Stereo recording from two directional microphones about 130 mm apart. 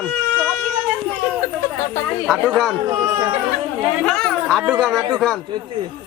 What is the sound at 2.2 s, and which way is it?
Speech, centre (ahead or behind).